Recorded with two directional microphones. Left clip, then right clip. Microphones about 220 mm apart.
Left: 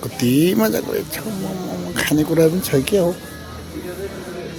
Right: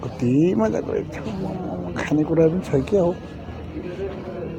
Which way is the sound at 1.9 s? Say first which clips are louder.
Left 3 dB; 45° left (ahead or behind).